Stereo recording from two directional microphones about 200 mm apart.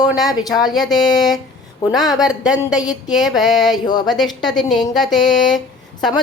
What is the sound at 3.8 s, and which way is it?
Speech, 20° left (ahead or behind).